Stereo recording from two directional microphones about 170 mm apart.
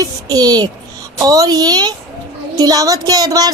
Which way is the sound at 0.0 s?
25° right (ahead or behind).